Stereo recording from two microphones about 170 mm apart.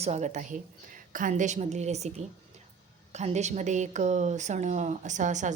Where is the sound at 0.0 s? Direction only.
40° right (ahead or behind).